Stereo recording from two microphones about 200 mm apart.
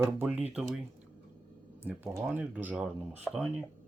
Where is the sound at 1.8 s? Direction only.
10° right (ahead or behind).